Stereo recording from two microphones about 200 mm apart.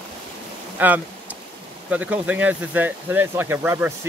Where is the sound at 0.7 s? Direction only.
10° right (ahead or behind).